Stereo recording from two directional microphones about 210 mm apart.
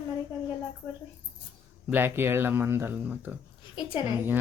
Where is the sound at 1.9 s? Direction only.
10° right (ahead or behind).